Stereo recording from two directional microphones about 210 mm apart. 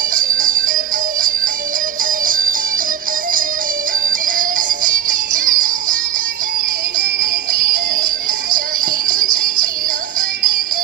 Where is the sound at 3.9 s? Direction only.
40° right (ahead or behind).